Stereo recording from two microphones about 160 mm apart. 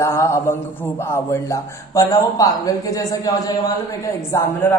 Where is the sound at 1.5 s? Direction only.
20° left (ahead or behind).